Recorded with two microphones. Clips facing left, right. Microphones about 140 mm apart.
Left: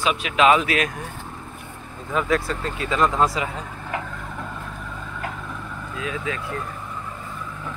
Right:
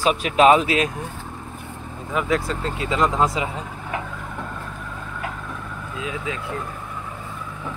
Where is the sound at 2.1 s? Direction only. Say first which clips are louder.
Even; 15° right (ahead or behind).